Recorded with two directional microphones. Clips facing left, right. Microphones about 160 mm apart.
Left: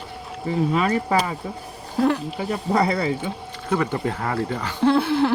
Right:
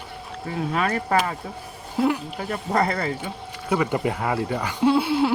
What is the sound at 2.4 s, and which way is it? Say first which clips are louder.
Speech: left 2 dB; 5° left (ahead or behind).